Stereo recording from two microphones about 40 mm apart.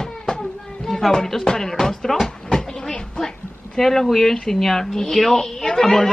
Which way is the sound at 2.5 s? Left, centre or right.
Centre.